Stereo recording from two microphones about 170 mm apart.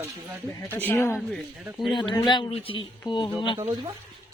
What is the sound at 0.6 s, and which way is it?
Speech, 10° left (ahead or behind).